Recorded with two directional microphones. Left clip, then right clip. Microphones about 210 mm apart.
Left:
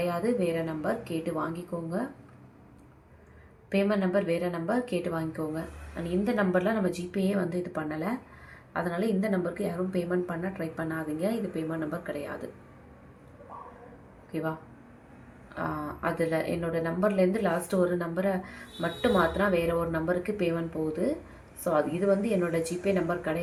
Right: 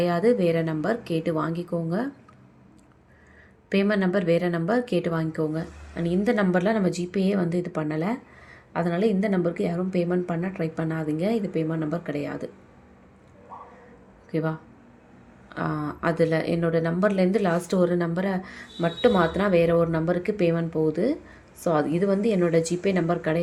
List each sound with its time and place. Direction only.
0.0 s speech: 45° right (ahead or behind)
3.7 s speech: 45° right (ahead or behind)
14.3 s speech: 45° right (ahead or behind)